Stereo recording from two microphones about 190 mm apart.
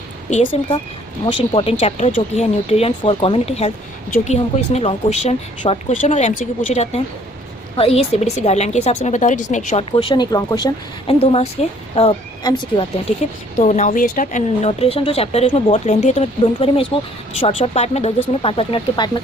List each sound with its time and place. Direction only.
0.3 s a woman's voice: 35° left (ahead or behind)
1.2 s a woman's voice: 25° left (ahead or behind)
9.9 s speech: 25° left (ahead or behind)
11.1 s a woman's voice: 30° left (ahead or behind)
13.6 s a woman's voice: 40° left (ahead or behind)